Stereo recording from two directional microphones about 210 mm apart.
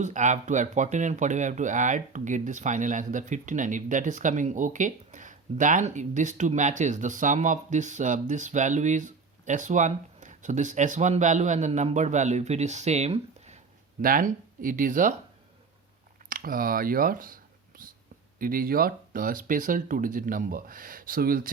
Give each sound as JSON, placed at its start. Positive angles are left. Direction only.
{"t": 0.0, "sound": "speech", "side_deg": -35}
{"t": 16.3, "sound": "speech", "side_deg": -40}